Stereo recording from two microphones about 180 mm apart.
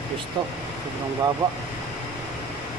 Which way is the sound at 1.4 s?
20° right (ahead or behind).